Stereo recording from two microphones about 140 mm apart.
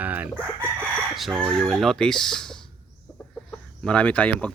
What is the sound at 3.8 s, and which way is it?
Speech, 10° left (ahead or behind).